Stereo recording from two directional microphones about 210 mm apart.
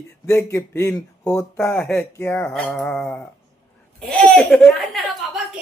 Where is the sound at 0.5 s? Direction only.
10° left (ahead or behind).